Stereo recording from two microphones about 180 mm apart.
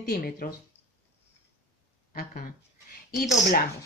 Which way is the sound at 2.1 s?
50° left (ahead or behind).